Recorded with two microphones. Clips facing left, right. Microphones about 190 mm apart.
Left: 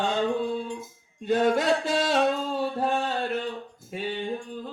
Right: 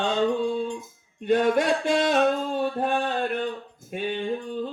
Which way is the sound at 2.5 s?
30° left (ahead or behind).